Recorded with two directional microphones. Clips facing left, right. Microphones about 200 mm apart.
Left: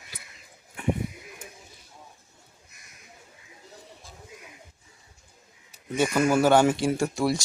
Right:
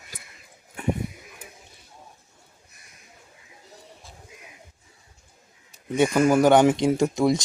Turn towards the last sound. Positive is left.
turn(degrees=-20)  # may be behind; listen again after turning